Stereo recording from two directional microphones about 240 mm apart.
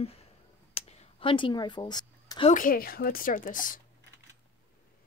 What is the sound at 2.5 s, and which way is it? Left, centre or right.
A woman's voice, left.